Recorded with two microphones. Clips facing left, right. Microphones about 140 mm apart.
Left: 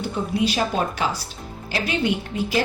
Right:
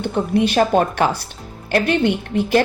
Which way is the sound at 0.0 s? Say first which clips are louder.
Right 5 dB; 60° right (ahead or behind).